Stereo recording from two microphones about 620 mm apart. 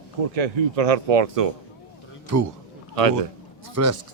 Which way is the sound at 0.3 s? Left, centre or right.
Right.